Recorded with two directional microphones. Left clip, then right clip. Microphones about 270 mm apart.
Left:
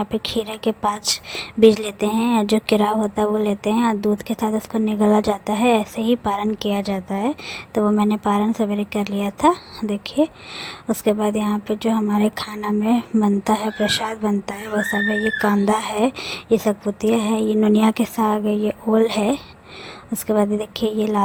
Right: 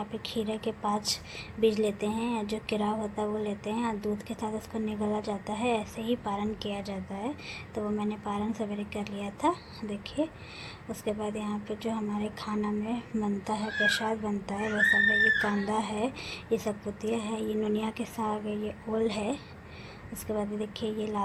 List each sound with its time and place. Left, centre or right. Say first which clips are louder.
0.0 s a woman's voice: left 11 dB; left